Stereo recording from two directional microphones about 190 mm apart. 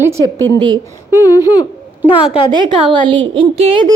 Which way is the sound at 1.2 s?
20° left (ahead or behind).